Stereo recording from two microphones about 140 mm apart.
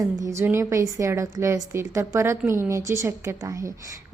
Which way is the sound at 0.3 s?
20° right (ahead or behind).